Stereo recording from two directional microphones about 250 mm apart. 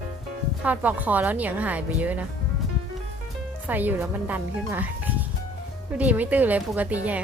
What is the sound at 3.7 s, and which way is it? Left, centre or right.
Speech, centre.